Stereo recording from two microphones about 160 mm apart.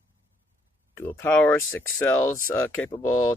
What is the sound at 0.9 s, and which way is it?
Speech, 15° left (ahead or behind).